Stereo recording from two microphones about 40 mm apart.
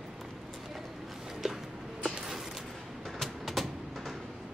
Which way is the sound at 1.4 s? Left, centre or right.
Centre.